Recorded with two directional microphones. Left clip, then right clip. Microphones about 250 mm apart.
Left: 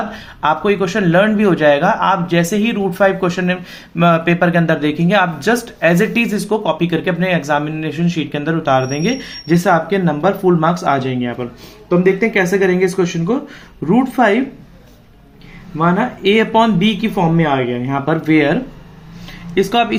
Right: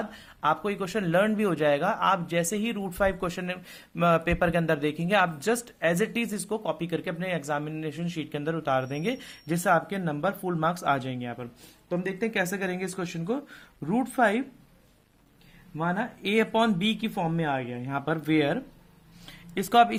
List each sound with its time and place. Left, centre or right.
0.1 s speech: right
15.8 s speech: right